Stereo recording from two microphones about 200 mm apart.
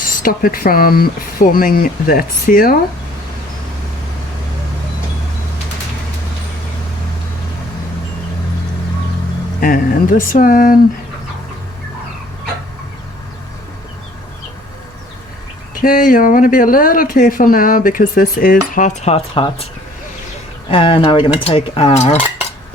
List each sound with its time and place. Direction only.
0.2 s speech: 45° left (ahead or behind)
9.6 s speech: 45° left (ahead or behind)
15.7 s speech: 45° left (ahead or behind); by 19.6 s 25° left (ahead or behind)
20.7 s dishes: 25° left (ahead or behind)